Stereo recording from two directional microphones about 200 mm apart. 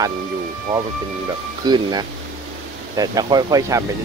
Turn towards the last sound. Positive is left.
turn(degrees=-20)  # may be behind; listen again after turning